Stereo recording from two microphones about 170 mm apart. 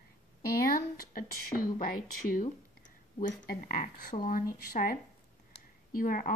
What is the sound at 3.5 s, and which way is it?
Speech, 60° left (ahead or behind).